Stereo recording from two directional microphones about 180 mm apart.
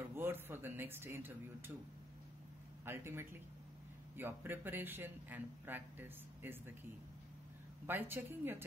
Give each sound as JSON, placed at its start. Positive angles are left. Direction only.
{"t": 0.1, "sound": "speech", "side_deg": -10}
{"t": 2.8, "sound": "a man's voice", "side_deg": -15}